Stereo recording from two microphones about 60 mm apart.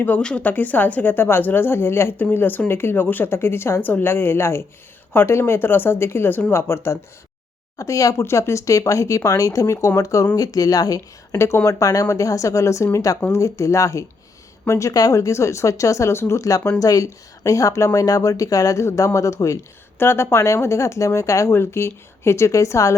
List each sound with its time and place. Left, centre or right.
0.2 s a woman's voice: centre
0.4 s speech: left
7.8 s speech: left
8.1 s speech: left
10.3 s speech: left
11.3 s speech: left
11.7 s speech: left
16.5 s speech: left
18.9 s speech: left
20.0 s speech: left
21.5 s speech: left